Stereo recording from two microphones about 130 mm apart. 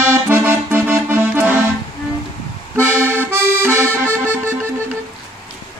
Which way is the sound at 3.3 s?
15° right (ahead or behind).